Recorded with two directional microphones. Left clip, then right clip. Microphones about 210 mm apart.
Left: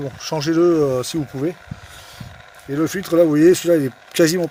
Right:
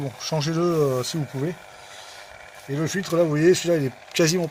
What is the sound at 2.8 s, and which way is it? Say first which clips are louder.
Speech: left 6 dB; 50° left (ahead or behind).